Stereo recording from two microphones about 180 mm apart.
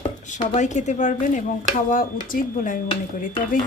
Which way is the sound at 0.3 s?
40° left (ahead or behind).